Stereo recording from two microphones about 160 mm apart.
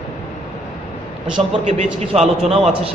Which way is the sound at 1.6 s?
40° right (ahead or behind).